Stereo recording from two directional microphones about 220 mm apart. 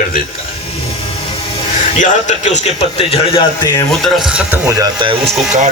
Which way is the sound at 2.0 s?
35° left (ahead or behind).